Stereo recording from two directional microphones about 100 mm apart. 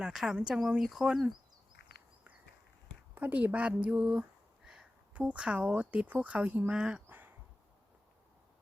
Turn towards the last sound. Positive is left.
turn(degrees=-20)  # may be behind; listen again after turning